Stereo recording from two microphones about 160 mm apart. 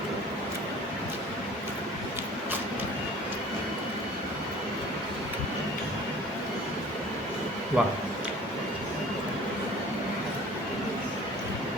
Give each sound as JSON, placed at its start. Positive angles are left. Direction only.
{"t": 7.8, "sound": "speech", "side_deg": -5}